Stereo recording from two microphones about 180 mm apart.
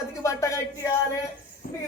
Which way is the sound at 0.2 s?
15° left (ahead or behind).